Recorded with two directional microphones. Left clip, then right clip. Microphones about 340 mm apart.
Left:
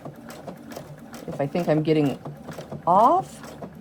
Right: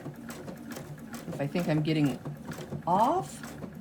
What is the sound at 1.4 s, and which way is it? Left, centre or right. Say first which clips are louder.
Speech: left 8 dB; left.